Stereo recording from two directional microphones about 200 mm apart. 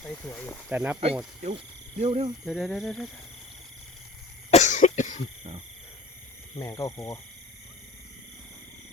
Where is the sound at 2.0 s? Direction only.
30° right (ahead or behind).